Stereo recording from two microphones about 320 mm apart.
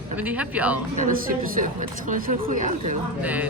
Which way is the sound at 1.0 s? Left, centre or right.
Right.